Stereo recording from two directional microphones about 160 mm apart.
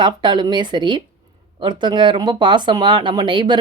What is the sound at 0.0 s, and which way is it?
Speech, 30° right (ahead or behind).